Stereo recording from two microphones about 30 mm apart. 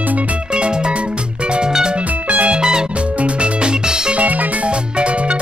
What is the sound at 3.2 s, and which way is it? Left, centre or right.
Music, right.